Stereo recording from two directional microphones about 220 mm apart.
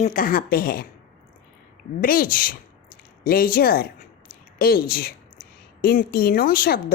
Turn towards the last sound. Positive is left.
turn(degrees=45)  # may be behind; listen again after turning